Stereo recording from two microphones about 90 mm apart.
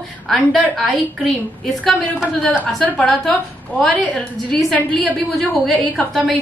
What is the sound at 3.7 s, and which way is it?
A woman's voice, 5° left (ahead or behind).